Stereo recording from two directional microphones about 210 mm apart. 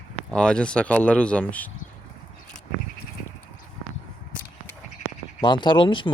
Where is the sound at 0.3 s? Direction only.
5° left (ahead or behind).